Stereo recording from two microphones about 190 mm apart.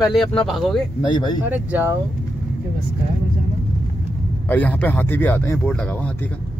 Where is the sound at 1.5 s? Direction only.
10° right (ahead or behind).